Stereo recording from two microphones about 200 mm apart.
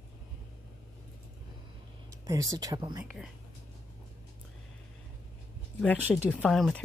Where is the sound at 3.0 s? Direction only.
5° right (ahead or behind).